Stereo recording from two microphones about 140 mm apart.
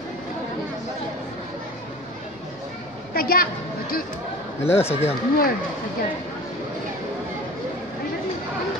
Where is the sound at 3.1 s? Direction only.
90° left.